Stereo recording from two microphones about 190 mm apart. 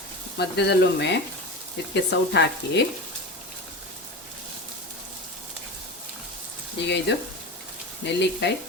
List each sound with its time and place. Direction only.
0.3 s frying: 60° left (ahead or behind)
7.1 s frying: 65° left (ahead or behind)